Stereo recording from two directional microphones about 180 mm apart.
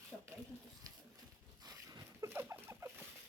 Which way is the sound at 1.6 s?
20° right (ahead or behind).